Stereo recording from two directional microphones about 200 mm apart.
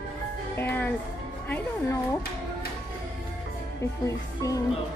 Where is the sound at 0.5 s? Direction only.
10° left (ahead or behind).